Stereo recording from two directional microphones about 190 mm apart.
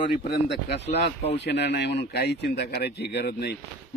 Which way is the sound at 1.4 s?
65° left (ahead or behind).